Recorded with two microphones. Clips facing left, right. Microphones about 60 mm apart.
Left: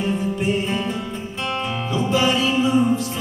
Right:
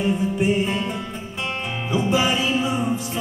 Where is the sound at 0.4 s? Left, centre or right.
Centre.